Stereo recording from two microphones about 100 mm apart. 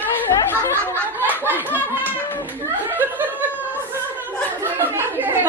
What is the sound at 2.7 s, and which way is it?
Laughter, 20° right (ahead or behind).